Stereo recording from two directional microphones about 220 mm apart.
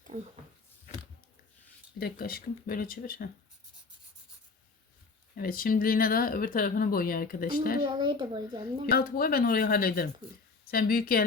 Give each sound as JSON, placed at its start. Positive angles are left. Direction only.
{"t": 0.1, "sound": "speech", "side_deg": -30}
{"t": 2.0, "sound": "speech", "side_deg": 45}
{"t": 5.3, "sound": "speech", "side_deg": 40}
{"t": 7.9, "sound": "a child's voice", "side_deg": -20}
{"t": 8.9, "sound": "speech", "side_deg": 45}